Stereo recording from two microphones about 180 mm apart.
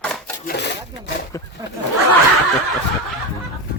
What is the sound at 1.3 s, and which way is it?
Speech, 15° left (ahead or behind).